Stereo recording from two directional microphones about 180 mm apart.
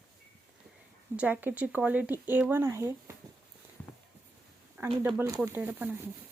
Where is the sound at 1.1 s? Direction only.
10° right (ahead or behind).